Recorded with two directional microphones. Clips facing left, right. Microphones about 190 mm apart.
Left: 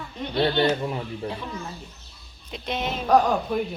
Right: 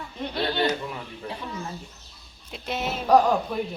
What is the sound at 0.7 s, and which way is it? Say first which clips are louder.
Speech: left 4 dB; 30° left (ahead or behind).